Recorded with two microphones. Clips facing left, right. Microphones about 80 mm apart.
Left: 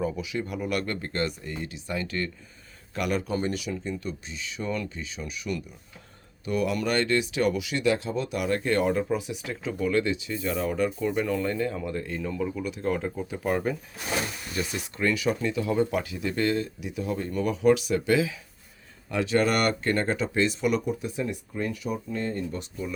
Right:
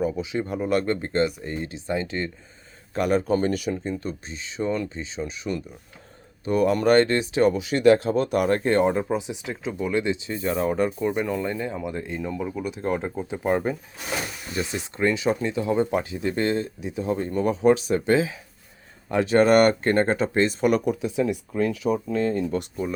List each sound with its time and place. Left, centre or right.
0.2 s speech: right
10.2 s speech: right
20.8 s speech: right
22.8 s speech: right